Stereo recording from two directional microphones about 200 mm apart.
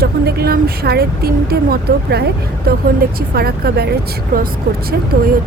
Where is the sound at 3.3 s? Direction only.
50° right (ahead or behind).